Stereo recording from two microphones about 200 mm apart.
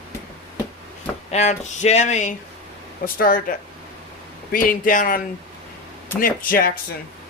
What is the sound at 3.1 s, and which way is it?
Speech, 45° left (ahead or behind).